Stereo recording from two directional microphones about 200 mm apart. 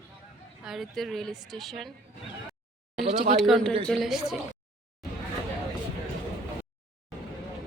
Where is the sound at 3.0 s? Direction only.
40° right (ahead or behind).